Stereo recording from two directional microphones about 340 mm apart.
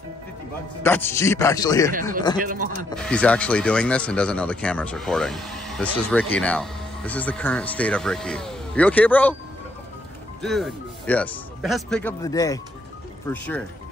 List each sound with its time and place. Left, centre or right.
0.8 s a man's voice: centre
2.4 s speech: right
2.9 s speech: centre
10.4 s speech: centre